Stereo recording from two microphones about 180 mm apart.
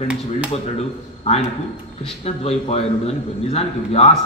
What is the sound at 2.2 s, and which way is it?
A man's voice, 35° left (ahead or behind).